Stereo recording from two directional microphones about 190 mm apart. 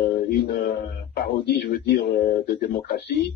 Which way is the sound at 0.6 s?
55° left (ahead or behind).